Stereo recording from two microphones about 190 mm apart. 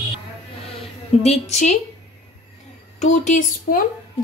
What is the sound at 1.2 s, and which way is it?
Speech, 35° left (ahead or behind).